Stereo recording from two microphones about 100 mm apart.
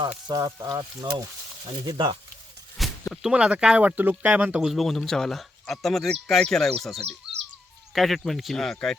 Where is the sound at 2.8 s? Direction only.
Centre (ahead or behind).